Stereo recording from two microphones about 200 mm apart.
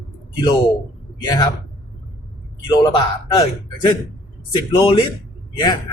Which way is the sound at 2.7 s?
20° left (ahead or behind).